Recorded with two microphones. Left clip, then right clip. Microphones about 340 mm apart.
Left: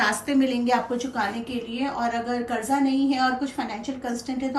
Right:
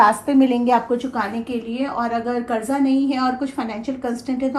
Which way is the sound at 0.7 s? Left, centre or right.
Centre.